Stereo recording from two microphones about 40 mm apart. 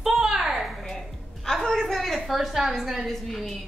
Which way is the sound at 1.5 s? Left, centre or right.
Centre.